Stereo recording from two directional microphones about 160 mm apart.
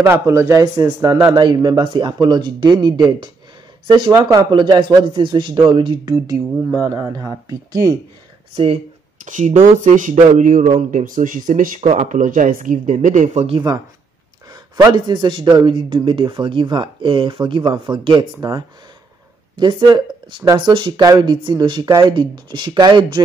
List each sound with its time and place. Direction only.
0.0 s a man's voice: 15° right (ahead or behind)
1.3 s speech: 25° right (ahead or behind)
9.2 s speech: 50° right (ahead or behind)
11.8 s speech: 45° right (ahead or behind)
14.5 s speech: 25° right (ahead or behind)
19.5 s speech: 25° right (ahead or behind)